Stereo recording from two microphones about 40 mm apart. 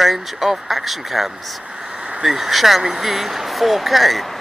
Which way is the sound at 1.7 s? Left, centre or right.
Centre.